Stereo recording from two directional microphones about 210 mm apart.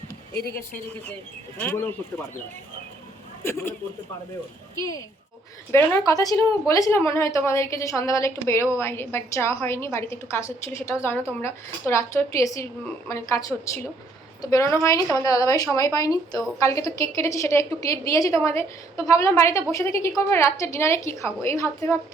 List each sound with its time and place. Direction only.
1.5 s a woman's voice: 10° left (ahead or behind)
3.4 s a woman's voice: 10° left (ahead or behind)
4.8 s a woman's voice: 15° left (ahead or behind)